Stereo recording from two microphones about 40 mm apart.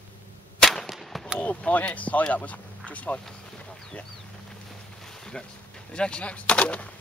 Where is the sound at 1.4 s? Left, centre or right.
Left.